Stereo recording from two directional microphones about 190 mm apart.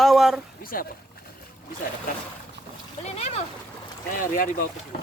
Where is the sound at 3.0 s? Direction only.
35° left (ahead or behind).